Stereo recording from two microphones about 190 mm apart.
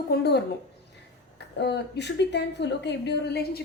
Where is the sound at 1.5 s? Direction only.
60° left (ahead or behind).